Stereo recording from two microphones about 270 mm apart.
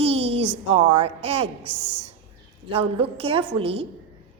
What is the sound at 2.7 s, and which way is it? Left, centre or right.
Speech, right.